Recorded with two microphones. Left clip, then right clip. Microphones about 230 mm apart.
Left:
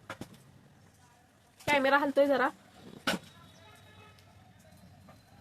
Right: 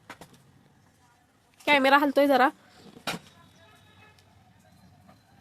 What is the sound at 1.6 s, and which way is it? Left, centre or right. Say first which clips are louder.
Speech: right 6 dB; right.